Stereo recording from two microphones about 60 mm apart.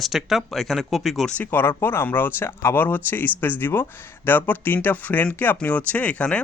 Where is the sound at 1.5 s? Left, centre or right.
Left.